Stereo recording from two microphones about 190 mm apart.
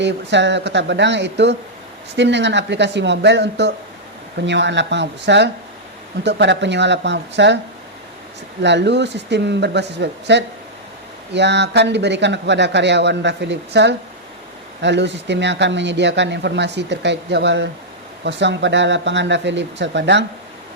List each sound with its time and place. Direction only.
0.0 s speech: 65° right (ahead or behind)
8.6 s a man's voice: 65° right (ahead or behind)